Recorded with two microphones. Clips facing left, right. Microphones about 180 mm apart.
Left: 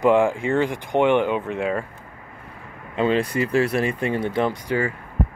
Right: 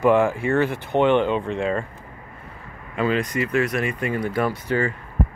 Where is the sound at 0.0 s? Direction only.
15° left (ahead or behind).